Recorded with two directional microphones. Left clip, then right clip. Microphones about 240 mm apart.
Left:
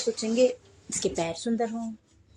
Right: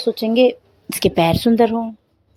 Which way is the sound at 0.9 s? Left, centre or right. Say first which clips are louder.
Right 13 dB; right.